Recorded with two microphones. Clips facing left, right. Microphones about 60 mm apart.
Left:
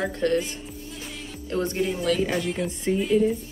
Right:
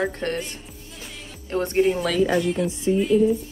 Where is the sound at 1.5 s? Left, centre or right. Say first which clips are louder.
Right 5 dB; right.